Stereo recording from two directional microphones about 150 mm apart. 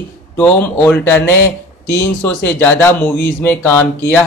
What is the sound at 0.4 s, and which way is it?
Speech, 10° left (ahead or behind).